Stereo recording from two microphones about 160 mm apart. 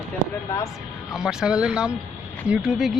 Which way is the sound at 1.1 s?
5° right (ahead or behind).